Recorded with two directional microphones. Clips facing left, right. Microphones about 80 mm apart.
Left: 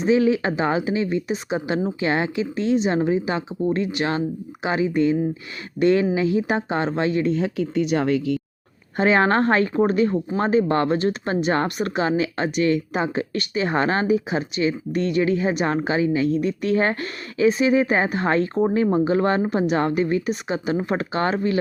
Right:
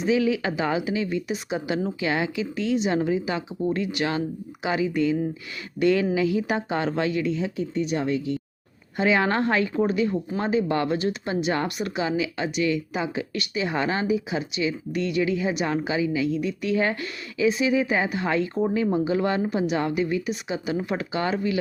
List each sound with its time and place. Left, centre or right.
0.0 s a woman's voice: left
7.3 s speech: left
9.0 s a woman's voice: left